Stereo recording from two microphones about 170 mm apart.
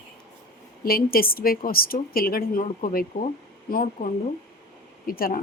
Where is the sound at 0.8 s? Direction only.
60° left (ahead or behind).